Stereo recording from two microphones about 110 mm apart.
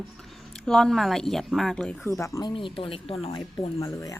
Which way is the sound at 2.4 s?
50° left (ahead or behind).